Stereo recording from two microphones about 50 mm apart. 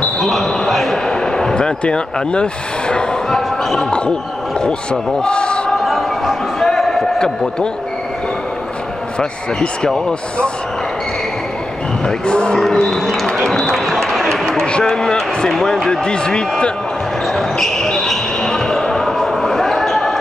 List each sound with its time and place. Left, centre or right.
0.2 s a sound: centre
5.2 s a man's voice: centre
5.9 s a sound: centre
9.2 s speech: centre
12.1 s speech: centre
12.5 s music: centre
13.5 s speech: centre
14.3 s a sound: centre
14.7 s speech: centre
17.3 s basketball bounce: centre